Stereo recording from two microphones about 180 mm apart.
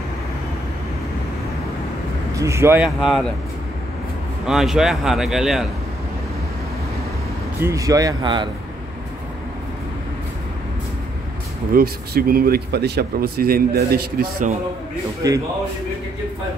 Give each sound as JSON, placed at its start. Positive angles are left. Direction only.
{"t": 2.3, "sound": "speech", "side_deg": -15}
{"t": 4.5, "sound": "a man's voice", "side_deg": 0}
{"t": 7.6, "sound": "speech", "side_deg": -20}
{"t": 11.7, "sound": "speech", "side_deg": -55}
{"t": 15.2, "sound": "speech", "side_deg": -20}